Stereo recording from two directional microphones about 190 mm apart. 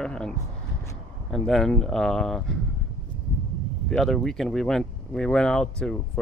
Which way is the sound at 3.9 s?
Centre (ahead or behind).